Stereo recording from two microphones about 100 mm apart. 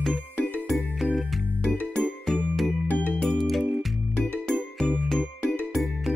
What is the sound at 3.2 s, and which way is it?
Music, centre (ahead or behind).